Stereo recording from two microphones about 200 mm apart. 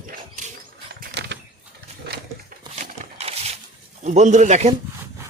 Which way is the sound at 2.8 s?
30° right (ahead or behind).